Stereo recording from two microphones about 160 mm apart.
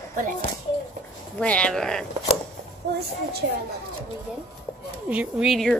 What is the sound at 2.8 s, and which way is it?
Speech, 90° right.